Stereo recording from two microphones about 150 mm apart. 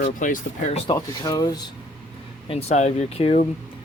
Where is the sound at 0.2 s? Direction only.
60° left (ahead or behind).